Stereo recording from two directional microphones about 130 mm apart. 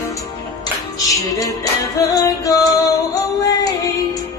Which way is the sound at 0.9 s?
25° left (ahead or behind).